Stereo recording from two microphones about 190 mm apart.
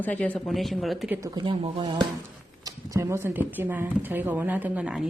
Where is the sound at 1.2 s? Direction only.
25° right (ahead or behind); by 5.1 s 5° right (ahead or behind).